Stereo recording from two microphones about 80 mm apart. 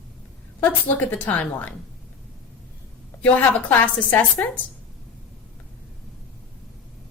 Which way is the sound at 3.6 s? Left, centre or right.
Centre.